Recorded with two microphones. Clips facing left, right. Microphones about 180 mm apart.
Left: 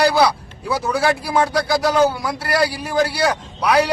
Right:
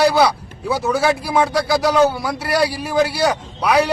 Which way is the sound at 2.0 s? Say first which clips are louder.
Right 1 dB; 25° right (ahead or behind).